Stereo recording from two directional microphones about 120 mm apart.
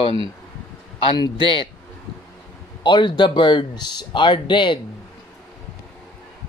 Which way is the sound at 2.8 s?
40° left (ahead or behind).